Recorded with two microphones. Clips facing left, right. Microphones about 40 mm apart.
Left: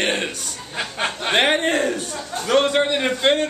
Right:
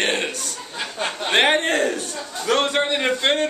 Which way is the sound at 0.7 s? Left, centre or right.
Left.